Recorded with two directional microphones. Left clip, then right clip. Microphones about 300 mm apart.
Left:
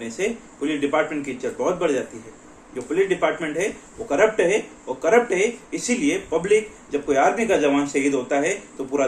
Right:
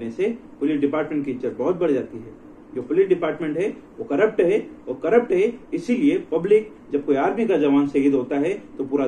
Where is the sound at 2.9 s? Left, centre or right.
Centre.